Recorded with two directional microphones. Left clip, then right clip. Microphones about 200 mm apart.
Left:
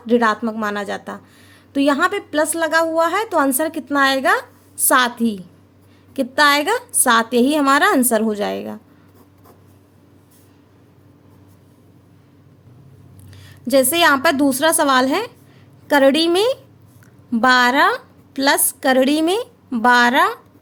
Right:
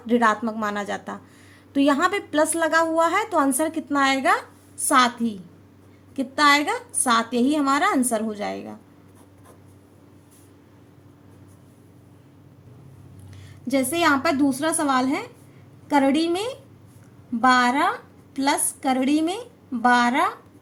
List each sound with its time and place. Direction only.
0.0 s a woman's voice: 15° left (ahead or behind); by 8.8 s 30° left (ahead or behind)
13.7 s a woman's voice: 40° left (ahead or behind)